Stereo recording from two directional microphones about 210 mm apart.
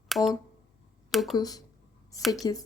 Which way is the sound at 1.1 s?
Centre (ahead or behind).